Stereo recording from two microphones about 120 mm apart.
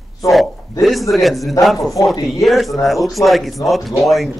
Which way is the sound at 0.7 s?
Centre (ahead or behind).